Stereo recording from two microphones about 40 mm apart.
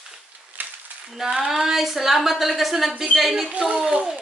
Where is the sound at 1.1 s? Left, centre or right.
Centre.